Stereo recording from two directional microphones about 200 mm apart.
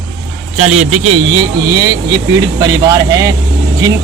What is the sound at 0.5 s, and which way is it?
Speech, 35° right (ahead or behind).